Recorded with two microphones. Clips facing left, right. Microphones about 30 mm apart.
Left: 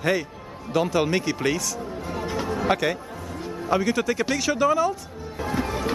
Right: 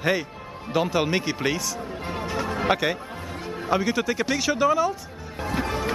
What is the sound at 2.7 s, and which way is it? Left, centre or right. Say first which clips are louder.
Speech: even; centre.